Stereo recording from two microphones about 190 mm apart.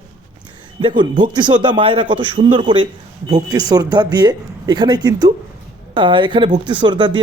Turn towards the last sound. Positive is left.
turn(degrees=-25)  # may be behind; listen again after turning